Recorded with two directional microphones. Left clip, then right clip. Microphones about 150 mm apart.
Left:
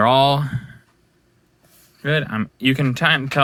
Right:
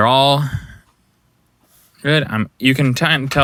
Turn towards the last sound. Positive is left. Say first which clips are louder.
# right 2 dB
turn(degrees=-30)  # may be behind; listen again after turning